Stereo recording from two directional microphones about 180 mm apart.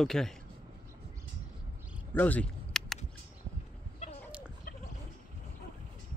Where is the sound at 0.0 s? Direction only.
Centre (ahead or behind).